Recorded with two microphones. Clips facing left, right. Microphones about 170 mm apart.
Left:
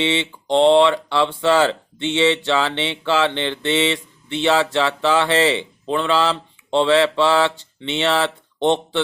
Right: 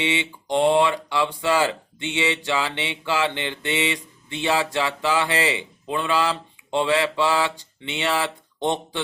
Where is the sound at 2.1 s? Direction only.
15° right (ahead or behind).